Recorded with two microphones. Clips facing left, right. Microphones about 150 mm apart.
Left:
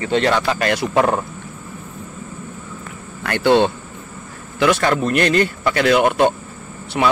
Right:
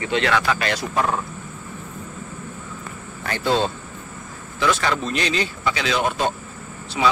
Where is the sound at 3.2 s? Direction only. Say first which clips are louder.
Left 7 dB; 70° left (ahead or behind).